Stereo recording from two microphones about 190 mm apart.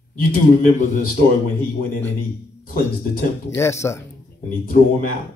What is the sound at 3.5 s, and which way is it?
Speech, 15° left (ahead or behind).